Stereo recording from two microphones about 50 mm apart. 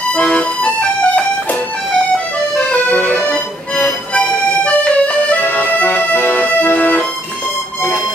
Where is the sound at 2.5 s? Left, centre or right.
Left.